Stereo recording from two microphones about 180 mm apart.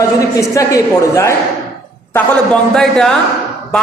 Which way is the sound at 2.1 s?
5° left (ahead or behind).